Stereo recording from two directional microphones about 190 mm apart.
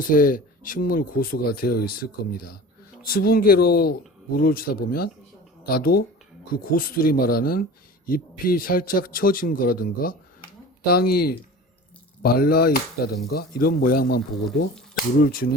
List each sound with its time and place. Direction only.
0.0 s speech: 45° left (ahead or behind)
3.1 s speech: 50° left (ahead or behind)